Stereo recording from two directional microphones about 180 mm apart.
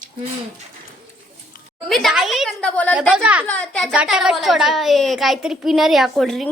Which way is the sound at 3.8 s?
5° right (ahead or behind).